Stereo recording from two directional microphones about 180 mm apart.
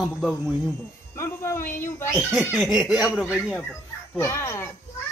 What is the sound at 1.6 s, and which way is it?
Speech, 45° left (ahead or behind).